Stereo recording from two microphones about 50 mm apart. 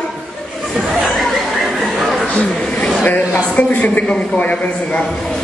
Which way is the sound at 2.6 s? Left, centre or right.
Left.